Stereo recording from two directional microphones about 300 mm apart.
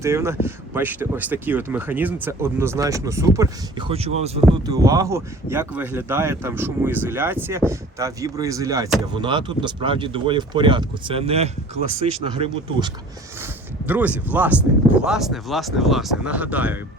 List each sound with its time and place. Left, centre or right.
0.0 s speech: centre
13.4 s speech: centre